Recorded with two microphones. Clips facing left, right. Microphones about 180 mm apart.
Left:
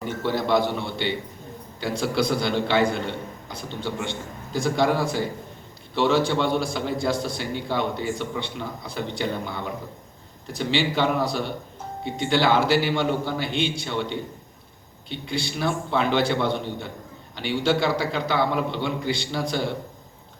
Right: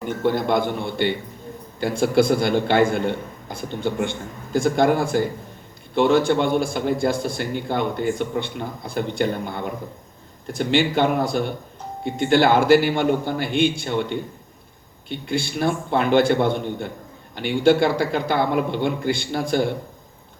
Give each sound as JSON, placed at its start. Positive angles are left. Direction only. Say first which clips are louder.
{"t": 0.0, "sound": "a man's voice", "louder": "right 4 dB", "side_deg": -50}